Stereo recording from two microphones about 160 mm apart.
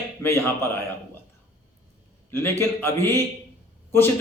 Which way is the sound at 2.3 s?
15° left (ahead or behind).